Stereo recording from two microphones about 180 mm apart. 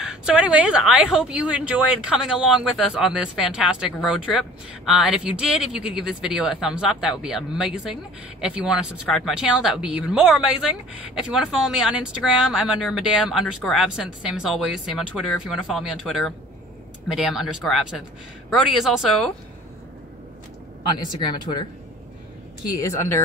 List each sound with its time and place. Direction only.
0.0 s speech: 5° right (ahead or behind)
21.2 s speech: 25° left (ahead or behind)
22.8 s speech: 15° left (ahead or behind)